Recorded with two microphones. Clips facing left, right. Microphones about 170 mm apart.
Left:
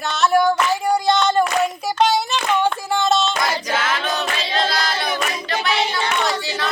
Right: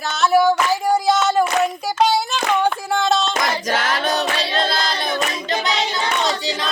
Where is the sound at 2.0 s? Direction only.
Centre (ahead or behind).